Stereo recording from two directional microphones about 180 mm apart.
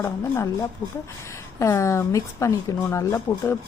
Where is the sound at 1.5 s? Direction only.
15° left (ahead or behind).